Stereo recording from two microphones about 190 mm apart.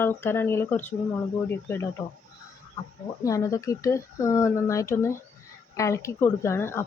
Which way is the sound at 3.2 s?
15° left (ahead or behind).